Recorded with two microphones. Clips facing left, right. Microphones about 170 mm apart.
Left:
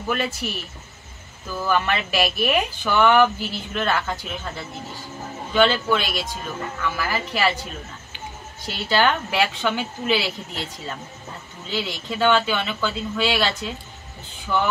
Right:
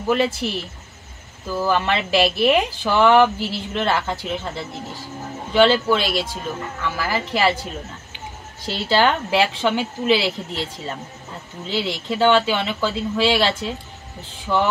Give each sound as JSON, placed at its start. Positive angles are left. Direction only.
{"t": 0.1, "sound": "speech", "side_deg": -30}
{"t": 8.6, "sound": "speech", "side_deg": -30}